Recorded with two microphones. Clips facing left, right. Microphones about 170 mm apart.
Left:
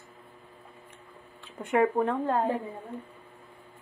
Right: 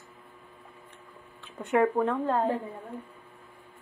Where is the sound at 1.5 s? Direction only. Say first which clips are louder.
Even; 10° left (ahead or behind).